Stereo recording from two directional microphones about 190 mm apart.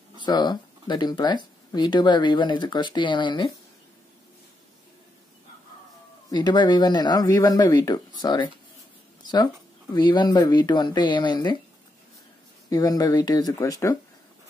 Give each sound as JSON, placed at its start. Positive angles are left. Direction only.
{"t": 0.2, "sound": "speech", "side_deg": 20}
{"t": 6.3, "sound": "speech", "side_deg": 20}
{"t": 12.6, "sound": "speech", "side_deg": 20}